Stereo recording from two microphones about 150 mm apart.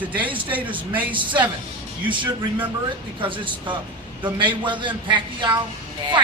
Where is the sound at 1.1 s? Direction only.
30° right (ahead or behind).